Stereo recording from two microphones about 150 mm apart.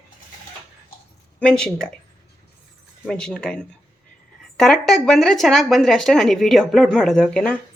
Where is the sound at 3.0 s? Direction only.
5° left (ahead or behind).